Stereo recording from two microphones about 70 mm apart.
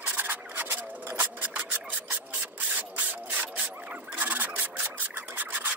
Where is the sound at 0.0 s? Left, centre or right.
Right.